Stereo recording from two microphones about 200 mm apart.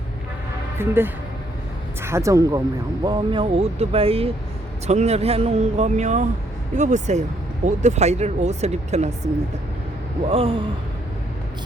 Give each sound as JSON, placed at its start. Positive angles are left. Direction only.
{"t": 0.8, "sound": "speech", "side_deg": -10}